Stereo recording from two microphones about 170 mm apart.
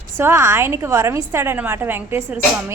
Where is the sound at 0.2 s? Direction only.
15° right (ahead or behind).